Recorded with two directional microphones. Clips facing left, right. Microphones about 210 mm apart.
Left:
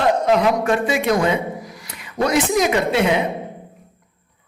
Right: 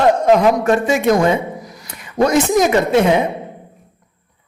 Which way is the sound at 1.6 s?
40° right (ahead or behind).